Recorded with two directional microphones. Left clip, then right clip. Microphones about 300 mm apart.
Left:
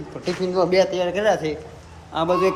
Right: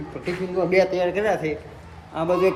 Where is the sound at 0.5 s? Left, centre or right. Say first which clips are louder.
Left 1 dB; centre.